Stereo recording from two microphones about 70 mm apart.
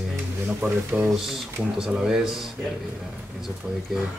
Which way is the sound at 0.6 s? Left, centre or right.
Right.